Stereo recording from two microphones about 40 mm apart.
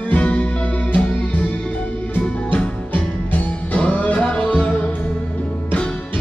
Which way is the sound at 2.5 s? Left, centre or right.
Left.